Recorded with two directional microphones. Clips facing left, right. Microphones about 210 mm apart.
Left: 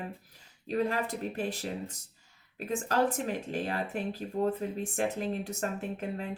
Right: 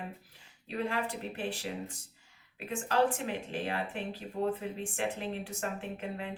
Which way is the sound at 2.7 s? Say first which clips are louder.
Left 1 dB; 40° left (ahead or behind).